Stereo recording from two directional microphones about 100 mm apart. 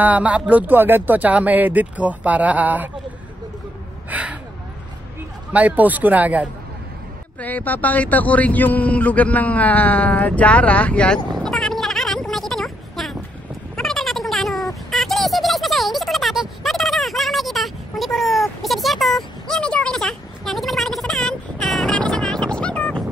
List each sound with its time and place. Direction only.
0.0 s speech: 15° right (ahead or behind)
4.1 s speech: 15° right (ahead or behind)
5.5 s speech: 15° right (ahead or behind)
7.3 s a man's voice: 15° left (ahead or behind)
11.4 s a sound: 5° left (ahead or behind)